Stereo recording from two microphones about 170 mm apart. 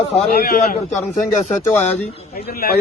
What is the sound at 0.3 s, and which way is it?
Speech, 65° left (ahead or behind).